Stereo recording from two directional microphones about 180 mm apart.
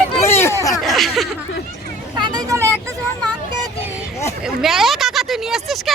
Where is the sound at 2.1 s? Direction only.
25° right (ahead or behind).